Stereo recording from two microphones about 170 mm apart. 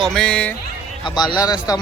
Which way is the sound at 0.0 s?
5° left (ahead or behind).